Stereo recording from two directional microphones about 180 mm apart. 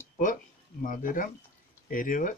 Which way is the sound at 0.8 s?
50° left (ahead or behind).